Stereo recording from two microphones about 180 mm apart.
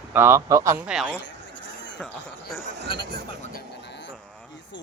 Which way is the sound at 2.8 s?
25° left (ahead or behind).